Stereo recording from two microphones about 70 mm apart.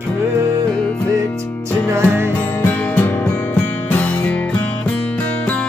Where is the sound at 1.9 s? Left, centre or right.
Right.